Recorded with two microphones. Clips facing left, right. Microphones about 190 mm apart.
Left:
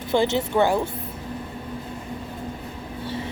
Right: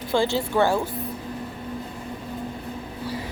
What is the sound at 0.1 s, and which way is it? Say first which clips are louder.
Speech: left 1 dB; 20° left (ahead or behind).